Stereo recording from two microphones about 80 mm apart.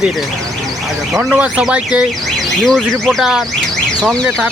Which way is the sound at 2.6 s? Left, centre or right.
Centre.